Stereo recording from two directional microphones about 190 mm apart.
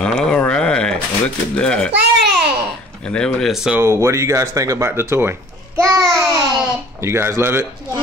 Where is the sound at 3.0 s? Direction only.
5° left (ahead or behind); by 7.7 s 10° right (ahead or behind).